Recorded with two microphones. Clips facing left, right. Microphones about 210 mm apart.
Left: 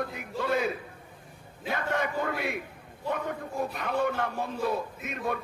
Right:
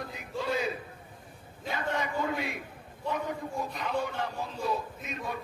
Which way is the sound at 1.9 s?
55° left (ahead or behind).